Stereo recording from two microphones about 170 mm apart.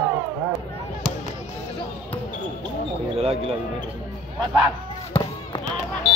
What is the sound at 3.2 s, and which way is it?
Speech, 35° right (ahead or behind).